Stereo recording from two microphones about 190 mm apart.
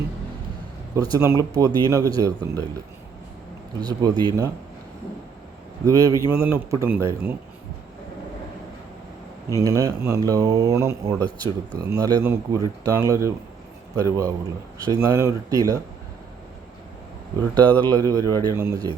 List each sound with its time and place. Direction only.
0.9 s speech: 20° right (ahead or behind)
3.8 s speech: 20° right (ahead or behind)
5.8 s speech: 20° right (ahead or behind)
9.6 s speech: 15° right (ahead or behind)
17.6 s a man's voice: 10° left (ahead or behind)
17.8 s speech: 20° right (ahead or behind)